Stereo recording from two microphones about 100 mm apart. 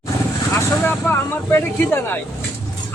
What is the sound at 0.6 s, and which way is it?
Speech, 20° left (ahead or behind).